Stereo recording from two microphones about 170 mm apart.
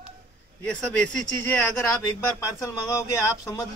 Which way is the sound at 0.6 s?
10° left (ahead or behind).